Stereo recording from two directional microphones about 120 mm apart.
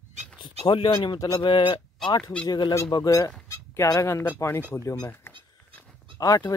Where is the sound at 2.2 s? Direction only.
10° left (ahead or behind).